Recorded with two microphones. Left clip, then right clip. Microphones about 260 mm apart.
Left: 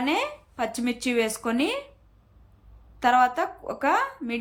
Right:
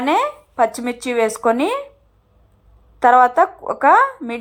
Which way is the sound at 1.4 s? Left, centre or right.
Right.